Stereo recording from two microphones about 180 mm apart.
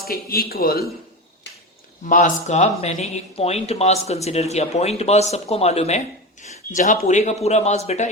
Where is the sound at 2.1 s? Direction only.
45° left (ahead or behind).